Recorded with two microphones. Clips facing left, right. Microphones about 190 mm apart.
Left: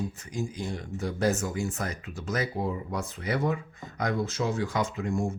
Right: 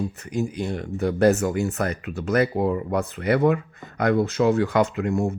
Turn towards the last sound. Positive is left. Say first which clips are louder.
# right 6 dB
turn(degrees=-65)  # may be behind; listen again after turning